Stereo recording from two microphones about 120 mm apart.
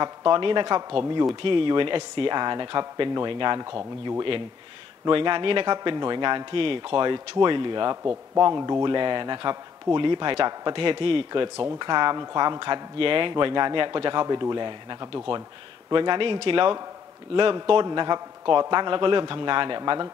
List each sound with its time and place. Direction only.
0.0 s speech: 35° right (ahead or behind)
1.3 s speech: 45° right (ahead or behind)
5.0 s speech: 45° right (ahead or behind)